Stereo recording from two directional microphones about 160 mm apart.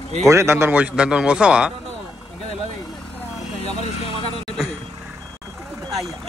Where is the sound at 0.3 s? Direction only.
15° right (ahead or behind).